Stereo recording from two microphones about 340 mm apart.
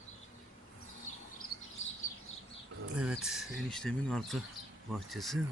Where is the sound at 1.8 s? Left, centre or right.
Left.